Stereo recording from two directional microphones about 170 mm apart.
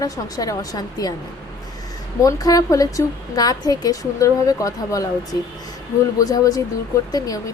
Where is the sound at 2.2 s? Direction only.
20° left (ahead or behind).